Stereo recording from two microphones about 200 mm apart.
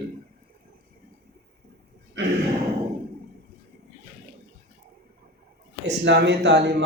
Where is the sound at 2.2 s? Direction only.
70° right (ahead or behind).